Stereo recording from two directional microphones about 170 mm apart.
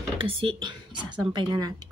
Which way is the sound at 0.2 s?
30° right (ahead or behind).